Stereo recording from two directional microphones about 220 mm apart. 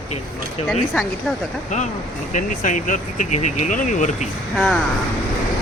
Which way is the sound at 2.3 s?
35° left (ahead or behind).